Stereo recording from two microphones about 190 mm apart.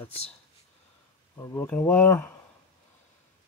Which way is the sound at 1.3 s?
15° left (ahead or behind).